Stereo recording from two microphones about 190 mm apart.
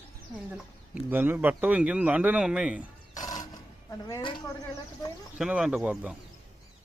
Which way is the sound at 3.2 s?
20° left (ahead or behind).